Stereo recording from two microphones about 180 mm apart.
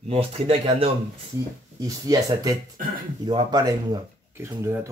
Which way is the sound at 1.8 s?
20° right (ahead or behind).